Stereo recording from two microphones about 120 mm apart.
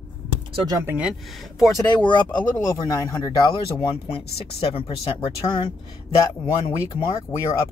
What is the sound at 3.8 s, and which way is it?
Speech, 55° left (ahead or behind).